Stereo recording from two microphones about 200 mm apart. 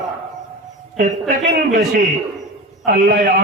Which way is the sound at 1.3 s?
45° right (ahead or behind).